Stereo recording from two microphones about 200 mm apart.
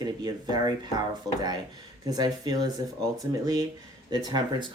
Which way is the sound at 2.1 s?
20° right (ahead or behind).